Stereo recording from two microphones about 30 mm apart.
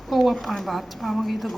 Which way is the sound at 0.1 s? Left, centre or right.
Centre.